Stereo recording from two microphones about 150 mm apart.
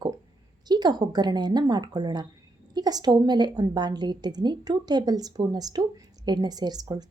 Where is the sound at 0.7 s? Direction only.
30° right (ahead or behind).